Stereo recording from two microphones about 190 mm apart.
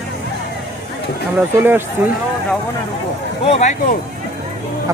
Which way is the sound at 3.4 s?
35° left (ahead or behind).